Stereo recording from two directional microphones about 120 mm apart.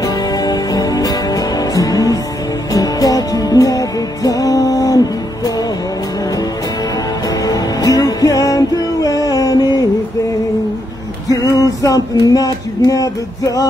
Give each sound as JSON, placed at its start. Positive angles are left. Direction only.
{"t": 0.0, "sound": "music", "side_deg": 30}
{"t": 7.2, "sound": "music", "side_deg": 30}
{"t": 11.2, "sound": "music", "side_deg": 30}